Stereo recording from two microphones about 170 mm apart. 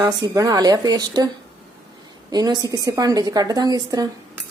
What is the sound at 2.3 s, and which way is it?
A woman's voice, 20° right (ahead or behind).